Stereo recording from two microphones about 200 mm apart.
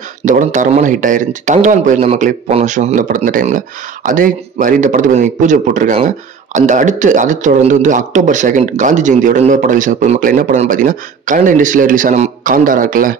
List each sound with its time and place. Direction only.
0.2 s speech: 40° right (ahead or behind)